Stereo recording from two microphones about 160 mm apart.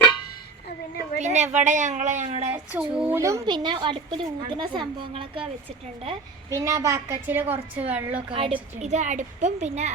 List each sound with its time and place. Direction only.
1.2 s a woman's voice: 45° right (ahead or behind)
2.5 s a woman's voice: 10° right (ahead or behind)
3.2 s a woman's voice: 20° right (ahead or behind); by 5.5 s 35° right (ahead or behind)
6.5 s a woman's voice: 20° right (ahead or behind)
8.3 s a woman's voice: 35° right (ahead or behind)